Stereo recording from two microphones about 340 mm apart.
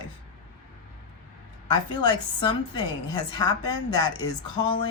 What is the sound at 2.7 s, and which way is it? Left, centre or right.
Speech, centre.